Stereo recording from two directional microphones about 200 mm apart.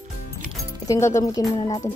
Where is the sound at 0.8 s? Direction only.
15° left (ahead or behind).